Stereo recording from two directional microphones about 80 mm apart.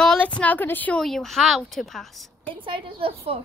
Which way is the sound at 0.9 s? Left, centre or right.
Centre.